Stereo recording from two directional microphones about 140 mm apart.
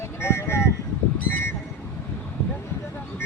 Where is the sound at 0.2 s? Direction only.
20° left (ahead or behind).